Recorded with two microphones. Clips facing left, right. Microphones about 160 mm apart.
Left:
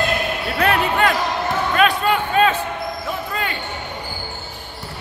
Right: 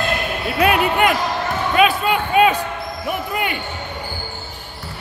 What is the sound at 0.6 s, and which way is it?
Basketball bounce, 15° right (ahead or behind).